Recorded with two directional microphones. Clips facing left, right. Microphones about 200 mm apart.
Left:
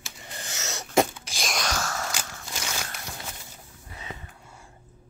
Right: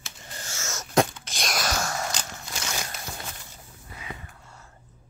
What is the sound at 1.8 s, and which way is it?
Biting, 15° right (ahead or behind).